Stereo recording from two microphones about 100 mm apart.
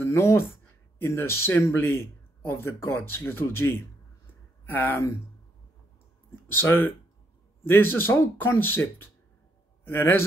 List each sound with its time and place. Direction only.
0.0 s a man's voice: 25° left (ahead or behind)
6.5 s a man's voice: 20° left (ahead or behind)